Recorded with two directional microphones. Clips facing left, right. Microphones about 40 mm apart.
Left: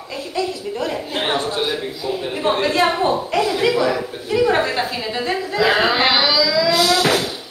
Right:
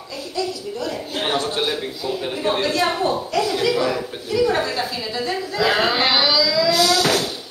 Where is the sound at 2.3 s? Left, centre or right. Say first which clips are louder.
Left 3 dB; left.